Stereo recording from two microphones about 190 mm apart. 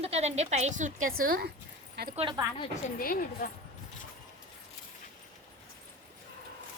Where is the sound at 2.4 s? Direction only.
20° right (ahead or behind).